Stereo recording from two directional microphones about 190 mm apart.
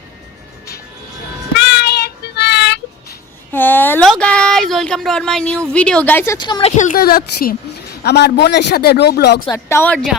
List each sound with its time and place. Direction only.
1.5 s child singing: 60° left (ahead or behind)
3.5 s a sound: 10° left (ahead or behind)
5.7 s a woman's voice: 5° left (ahead or behind); by 9.4 s 60° left (ahead or behind)
9.5 s a woman's voice: 15° left (ahead or behind)